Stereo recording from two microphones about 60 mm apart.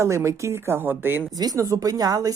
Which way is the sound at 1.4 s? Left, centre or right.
Right.